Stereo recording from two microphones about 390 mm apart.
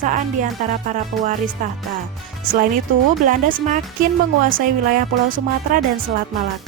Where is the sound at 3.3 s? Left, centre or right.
Right.